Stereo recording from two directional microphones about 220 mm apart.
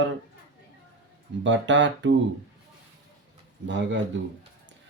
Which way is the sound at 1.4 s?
55° right (ahead or behind).